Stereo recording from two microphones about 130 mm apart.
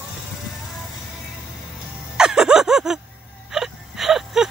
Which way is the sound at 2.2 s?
5° right (ahead or behind).